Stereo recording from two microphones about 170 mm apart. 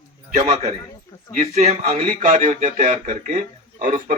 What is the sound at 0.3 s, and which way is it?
Speech, 45° right (ahead or behind).